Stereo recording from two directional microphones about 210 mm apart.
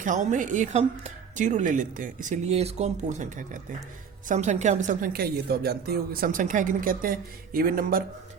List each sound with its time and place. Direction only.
0.0 s a woman's voice: 35° right (ahead or behind)